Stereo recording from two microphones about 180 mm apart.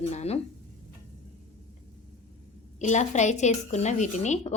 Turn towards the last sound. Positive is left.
turn(degrees=40)  # may be behind; listen again after turning